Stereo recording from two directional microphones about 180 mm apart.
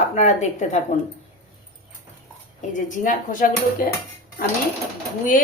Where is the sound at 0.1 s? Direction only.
40° left (ahead or behind).